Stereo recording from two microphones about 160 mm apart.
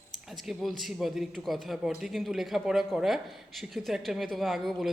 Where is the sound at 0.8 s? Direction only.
Centre (ahead or behind).